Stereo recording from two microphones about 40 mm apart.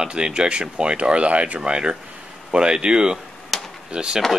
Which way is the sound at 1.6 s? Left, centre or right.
Right.